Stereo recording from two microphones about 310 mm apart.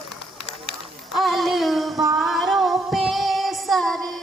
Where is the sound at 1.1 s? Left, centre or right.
Centre.